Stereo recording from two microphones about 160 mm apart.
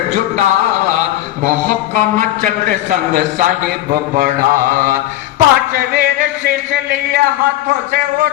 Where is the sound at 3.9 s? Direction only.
70° right (ahead or behind).